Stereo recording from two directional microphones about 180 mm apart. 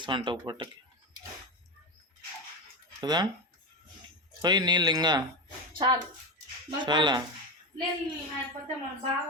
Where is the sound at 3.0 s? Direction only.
25° right (ahead or behind).